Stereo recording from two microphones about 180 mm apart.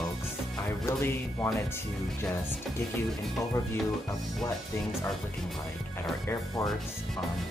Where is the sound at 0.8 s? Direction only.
15° left (ahead or behind).